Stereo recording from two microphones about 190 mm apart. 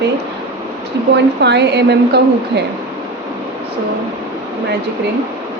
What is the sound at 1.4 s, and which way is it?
Speech, 65° right (ahead or behind).